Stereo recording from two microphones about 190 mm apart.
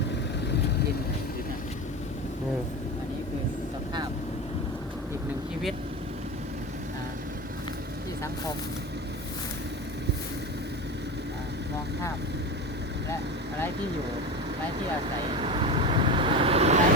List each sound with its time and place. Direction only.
15.4 s vehicle: 25° right (ahead or behind)